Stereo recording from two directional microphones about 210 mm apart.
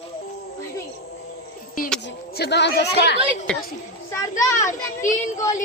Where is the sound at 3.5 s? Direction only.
5° left (ahead or behind).